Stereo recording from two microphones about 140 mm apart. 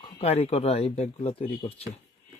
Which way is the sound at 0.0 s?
45° left (ahead or behind).